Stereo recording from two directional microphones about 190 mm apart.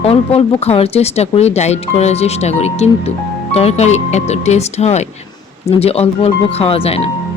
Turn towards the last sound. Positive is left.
turn(degrees=30)  # may be behind; listen again after turning